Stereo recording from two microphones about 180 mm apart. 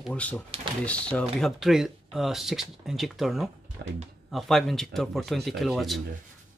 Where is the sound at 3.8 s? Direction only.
70° right (ahead or behind).